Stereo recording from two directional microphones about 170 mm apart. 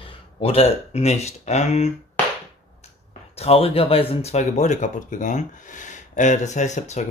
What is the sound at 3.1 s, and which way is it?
Speech, 35° left (ahead or behind).